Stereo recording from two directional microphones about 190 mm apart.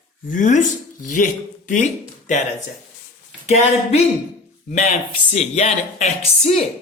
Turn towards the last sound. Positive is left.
turn(degrees=35)  # may be behind; listen again after turning